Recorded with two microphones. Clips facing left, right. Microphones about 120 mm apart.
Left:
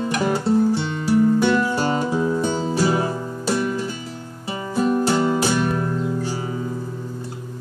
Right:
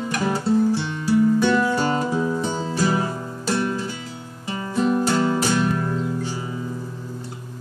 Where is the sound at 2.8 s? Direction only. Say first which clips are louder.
Left 1 dB; 20° left (ahead or behind).